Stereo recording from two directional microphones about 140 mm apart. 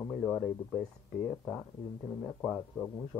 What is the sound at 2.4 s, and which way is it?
Speech, centre (ahead or behind).